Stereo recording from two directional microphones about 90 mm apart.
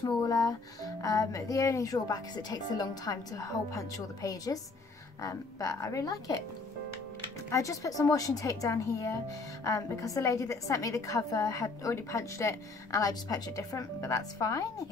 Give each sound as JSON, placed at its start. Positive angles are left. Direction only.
{"t": 0.0, "sound": "a woman's voice", "side_deg": 40}
{"t": 7.4, "sound": "a woman's voice", "side_deg": 35}